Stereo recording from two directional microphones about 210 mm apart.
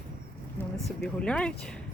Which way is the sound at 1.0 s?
5° left (ahead or behind).